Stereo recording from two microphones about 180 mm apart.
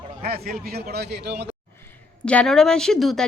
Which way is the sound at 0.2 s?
55° right (ahead or behind).